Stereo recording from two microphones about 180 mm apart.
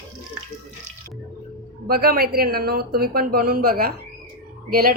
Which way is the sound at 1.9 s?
60° right (ahead or behind).